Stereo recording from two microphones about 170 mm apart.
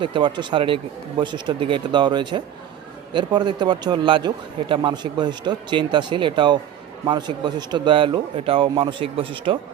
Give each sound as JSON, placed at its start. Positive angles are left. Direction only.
{"t": 0.0, "sound": "a man's voice", "side_deg": -30}